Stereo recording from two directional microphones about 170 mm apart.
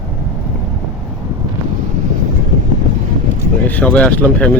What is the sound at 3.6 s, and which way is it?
Speech, 10° left (ahead or behind).